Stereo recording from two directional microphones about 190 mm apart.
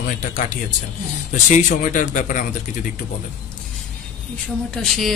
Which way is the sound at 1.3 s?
40° left (ahead or behind).